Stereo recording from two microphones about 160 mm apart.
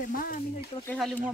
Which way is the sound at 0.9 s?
Centre (ahead or behind).